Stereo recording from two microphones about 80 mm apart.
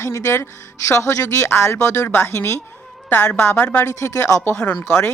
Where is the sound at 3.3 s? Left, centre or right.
Left.